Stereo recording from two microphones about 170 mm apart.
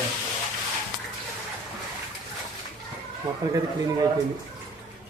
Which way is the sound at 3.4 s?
25° right (ahead or behind).